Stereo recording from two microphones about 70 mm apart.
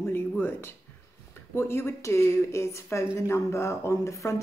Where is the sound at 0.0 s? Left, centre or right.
Left.